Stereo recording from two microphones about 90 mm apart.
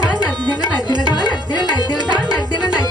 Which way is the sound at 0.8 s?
50° left (ahead or behind).